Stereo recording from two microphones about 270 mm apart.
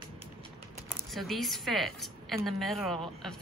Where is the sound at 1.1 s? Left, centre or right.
Centre.